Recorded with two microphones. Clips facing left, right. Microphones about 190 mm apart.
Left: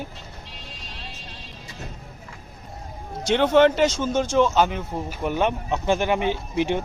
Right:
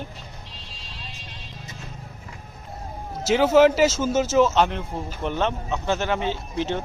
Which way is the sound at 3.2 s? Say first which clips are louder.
Right 1 dB; 5° right (ahead or behind).